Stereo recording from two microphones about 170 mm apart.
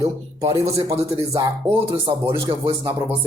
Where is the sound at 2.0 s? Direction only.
15° right (ahead or behind).